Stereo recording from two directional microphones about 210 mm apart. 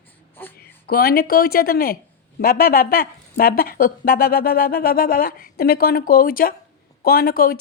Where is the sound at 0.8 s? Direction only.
45° left (ahead or behind).